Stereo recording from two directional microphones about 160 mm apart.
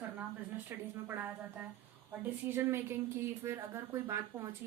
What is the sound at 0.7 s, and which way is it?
A woman's voice, 15° right (ahead or behind).